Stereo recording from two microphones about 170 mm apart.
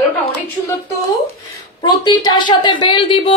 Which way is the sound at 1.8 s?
25° left (ahead or behind).